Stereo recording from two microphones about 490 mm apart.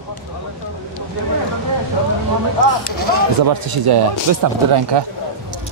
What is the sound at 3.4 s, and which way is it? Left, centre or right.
Speech, right.